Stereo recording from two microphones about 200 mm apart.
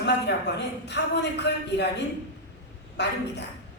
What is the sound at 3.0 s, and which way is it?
Speech, 60° left (ahead or behind).